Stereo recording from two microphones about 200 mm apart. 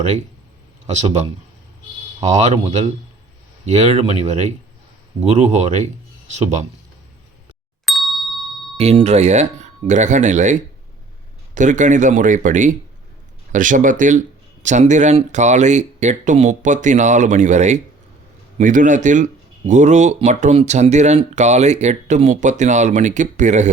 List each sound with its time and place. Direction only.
2.2 s speech: 35° right (ahead or behind)
7.9 s ding: centre (ahead or behind)
8.8 s speech: 30° right (ahead or behind)